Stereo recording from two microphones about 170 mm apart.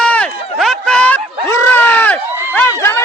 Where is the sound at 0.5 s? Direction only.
Centre (ahead or behind).